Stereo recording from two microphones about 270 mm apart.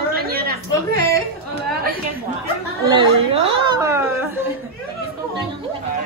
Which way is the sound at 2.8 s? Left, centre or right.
Centre.